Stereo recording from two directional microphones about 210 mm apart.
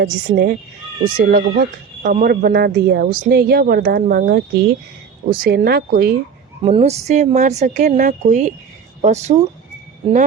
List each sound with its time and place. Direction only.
0.0 s speech: 45° right (ahead or behind)
6.6 s speech: 25° right (ahead or behind)